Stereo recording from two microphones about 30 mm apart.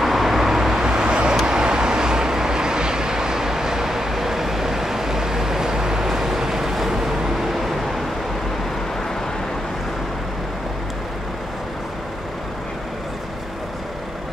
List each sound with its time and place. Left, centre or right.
0.0 s vehicle: centre
0.8 s vehicle: right; by 8.0 s centre